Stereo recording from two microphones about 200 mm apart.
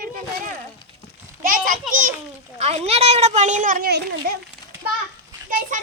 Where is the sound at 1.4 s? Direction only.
45° right (ahead or behind).